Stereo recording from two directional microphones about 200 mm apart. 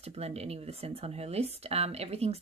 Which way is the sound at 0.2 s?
30° right (ahead or behind).